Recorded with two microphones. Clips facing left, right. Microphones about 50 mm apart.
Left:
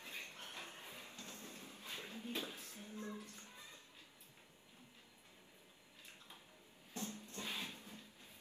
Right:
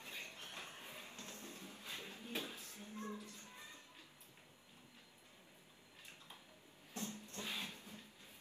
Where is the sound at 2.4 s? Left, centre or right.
Left.